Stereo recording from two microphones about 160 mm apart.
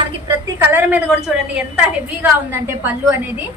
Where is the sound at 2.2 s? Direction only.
15° right (ahead or behind).